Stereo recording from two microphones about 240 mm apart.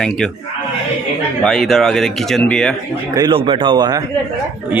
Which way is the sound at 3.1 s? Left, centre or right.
Centre.